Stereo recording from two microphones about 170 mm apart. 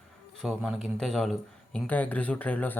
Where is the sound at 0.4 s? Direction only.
Centre (ahead or behind).